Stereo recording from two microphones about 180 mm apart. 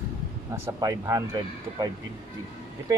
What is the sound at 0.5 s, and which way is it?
Speech, 20° right (ahead or behind).